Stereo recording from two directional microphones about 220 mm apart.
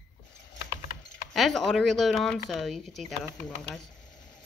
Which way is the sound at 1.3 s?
Centre (ahead or behind).